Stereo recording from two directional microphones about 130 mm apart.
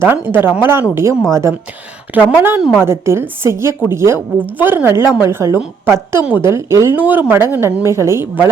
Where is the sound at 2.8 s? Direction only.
20° right (ahead or behind).